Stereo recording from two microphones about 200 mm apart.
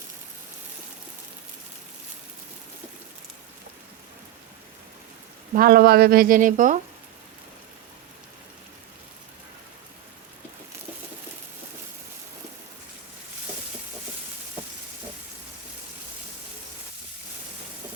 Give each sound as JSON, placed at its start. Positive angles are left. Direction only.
{"t": 5.5, "sound": "speech", "side_deg": -50}